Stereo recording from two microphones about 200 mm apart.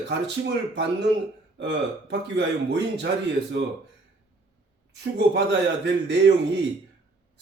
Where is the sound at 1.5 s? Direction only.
60° right (ahead or behind).